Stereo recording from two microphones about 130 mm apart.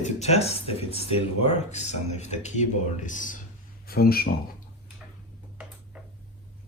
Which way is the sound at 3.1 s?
85° left.